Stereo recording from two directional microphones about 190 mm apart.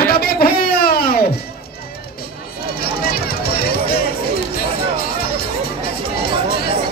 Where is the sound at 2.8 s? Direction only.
55° left (ahead or behind).